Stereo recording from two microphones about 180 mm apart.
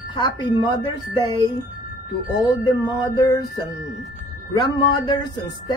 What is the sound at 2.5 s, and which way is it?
Music, 20° left (ahead or behind).